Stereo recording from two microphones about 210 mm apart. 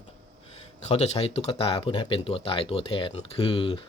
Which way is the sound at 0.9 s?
30° left (ahead or behind).